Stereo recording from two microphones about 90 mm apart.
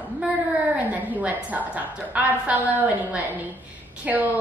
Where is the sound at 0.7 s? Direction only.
15° right (ahead or behind).